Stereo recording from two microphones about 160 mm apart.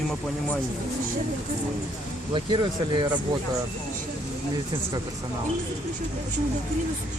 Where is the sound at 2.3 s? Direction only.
30° right (ahead or behind).